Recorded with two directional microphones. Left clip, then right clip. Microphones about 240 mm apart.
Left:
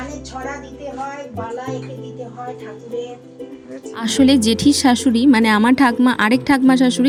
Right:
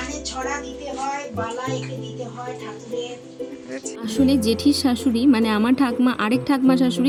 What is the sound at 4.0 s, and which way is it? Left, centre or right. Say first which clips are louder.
A woman's voice: left 6 dB; left.